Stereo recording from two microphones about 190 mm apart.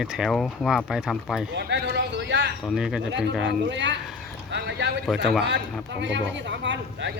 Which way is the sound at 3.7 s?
70° right (ahead or behind).